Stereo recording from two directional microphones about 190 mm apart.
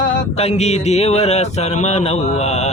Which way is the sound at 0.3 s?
35° left (ahead or behind).